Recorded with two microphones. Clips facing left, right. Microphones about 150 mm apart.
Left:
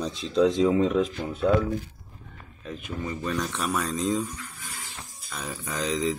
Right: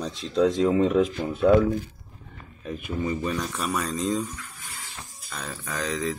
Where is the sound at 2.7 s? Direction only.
10° right (ahead or behind).